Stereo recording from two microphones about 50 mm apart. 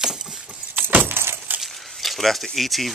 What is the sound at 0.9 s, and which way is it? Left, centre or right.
Keys jangling, right.